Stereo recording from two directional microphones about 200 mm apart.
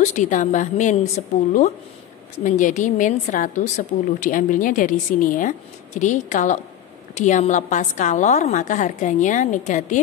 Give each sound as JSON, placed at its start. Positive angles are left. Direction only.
{"t": 0.0, "sound": "a woman's voice", "side_deg": 35}
{"t": 2.4, "sound": "a woman's voice", "side_deg": 40}